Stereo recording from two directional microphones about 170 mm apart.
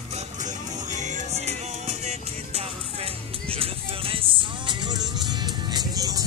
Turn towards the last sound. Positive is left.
turn(degrees=-20)  # may be behind; listen again after turning